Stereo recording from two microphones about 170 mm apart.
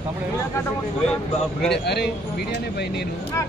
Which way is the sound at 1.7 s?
80° left.